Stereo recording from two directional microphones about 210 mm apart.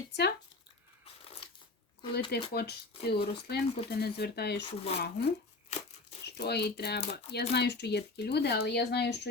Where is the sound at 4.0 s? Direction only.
50° left (ahead or behind).